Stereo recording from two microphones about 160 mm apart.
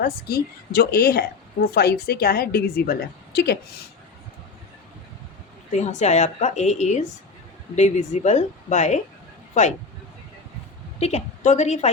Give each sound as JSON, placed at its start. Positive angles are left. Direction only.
{"t": 0.0, "sound": "a woman's voice", "side_deg": 75}
{"t": 1.6, "sound": "a woman's voice", "side_deg": 85}
{"t": 5.7, "sound": "a woman's voice", "side_deg": 45}
{"t": 11.0, "sound": "a woman's voice", "side_deg": 45}